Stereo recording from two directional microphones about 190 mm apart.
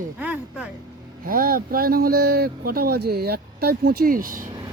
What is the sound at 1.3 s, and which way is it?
Speech, 50° right (ahead or behind).